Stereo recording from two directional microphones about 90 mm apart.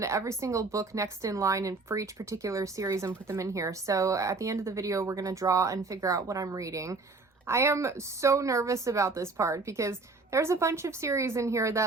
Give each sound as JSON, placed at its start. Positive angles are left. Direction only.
{"t": 0.0, "sound": "a woman's voice", "side_deg": -35}